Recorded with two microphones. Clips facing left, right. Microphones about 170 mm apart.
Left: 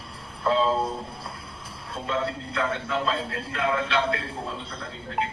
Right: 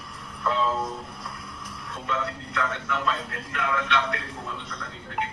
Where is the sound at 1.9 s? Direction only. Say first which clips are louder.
Left 3 dB; 30° left (ahead or behind).